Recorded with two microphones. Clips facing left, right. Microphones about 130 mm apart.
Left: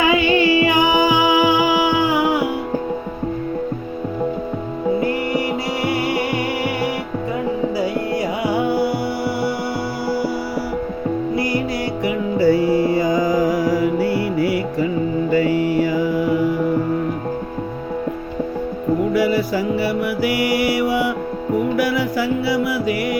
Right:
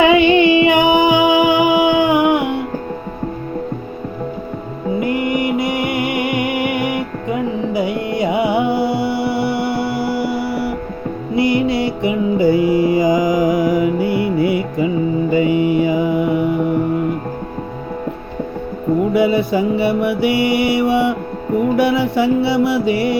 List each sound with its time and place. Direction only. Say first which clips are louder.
0.0 s music: right 5 dB; 25° right (ahead or behind)
4.9 s music: right 6 dB; 15° right (ahead or behind)
19.1 s mantra: right 3 dB; 20° right (ahead or behind)
21.8 s music: right 4 dB; 25° right (ahead or behind)